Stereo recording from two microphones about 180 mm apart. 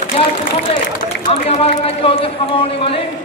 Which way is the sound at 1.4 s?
35° left (ahead or behind).